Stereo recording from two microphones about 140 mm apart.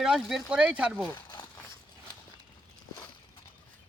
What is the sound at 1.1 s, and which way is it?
Crumpling, 30° left (ahead or behind).